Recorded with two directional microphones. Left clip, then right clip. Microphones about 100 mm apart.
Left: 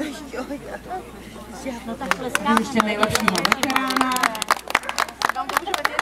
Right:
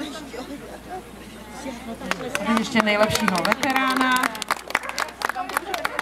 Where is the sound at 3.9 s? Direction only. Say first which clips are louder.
Even; 20° left (ahead or behind).